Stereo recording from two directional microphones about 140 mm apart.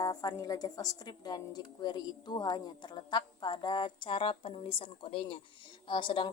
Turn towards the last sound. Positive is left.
turn(degrees=35)  # may be behind; listen again after turning